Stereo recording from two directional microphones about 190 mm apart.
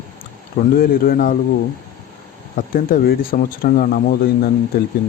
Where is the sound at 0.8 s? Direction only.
50° left (ahead or behind).